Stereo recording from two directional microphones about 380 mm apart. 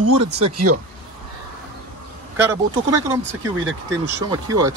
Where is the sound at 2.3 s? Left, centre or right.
Centre.